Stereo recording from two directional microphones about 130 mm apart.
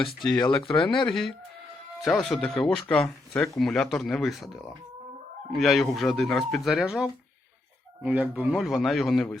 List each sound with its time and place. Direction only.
0.2 s speech: 35° left (ahead or behind)
0.7 s speech: 5° left (ahead or behind)